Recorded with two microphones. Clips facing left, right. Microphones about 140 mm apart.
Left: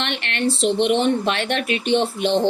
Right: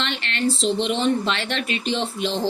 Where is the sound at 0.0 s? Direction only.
60° left (ahead or behind).